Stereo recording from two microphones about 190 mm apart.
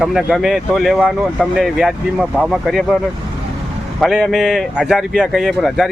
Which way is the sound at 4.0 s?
Centre (ahead or behind).